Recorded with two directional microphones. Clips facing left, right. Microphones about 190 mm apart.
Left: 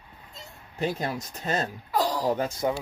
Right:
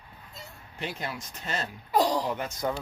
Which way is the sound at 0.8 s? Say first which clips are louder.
Left 7 dB; 40° left (ahead or behind).